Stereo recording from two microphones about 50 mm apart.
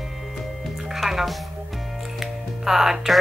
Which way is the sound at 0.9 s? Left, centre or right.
Centre.